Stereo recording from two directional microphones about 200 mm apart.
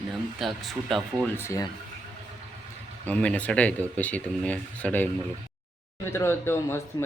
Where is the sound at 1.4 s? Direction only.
15° left (ahead or behind).